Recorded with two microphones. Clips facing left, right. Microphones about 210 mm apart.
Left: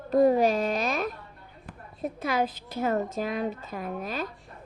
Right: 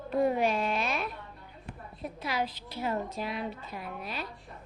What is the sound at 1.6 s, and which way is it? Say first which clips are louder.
A woman's voice: left 6 dB; 45° left (ahead or behind).